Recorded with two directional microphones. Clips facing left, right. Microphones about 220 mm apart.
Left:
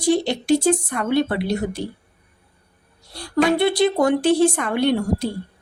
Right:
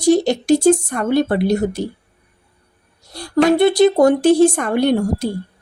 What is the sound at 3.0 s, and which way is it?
A woman's voice, 45° right (ahead or behind).